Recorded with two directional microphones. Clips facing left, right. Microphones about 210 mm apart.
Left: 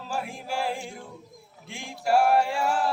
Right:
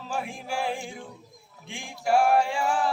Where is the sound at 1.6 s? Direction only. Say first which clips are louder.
Even; 5° left (ahead or behind).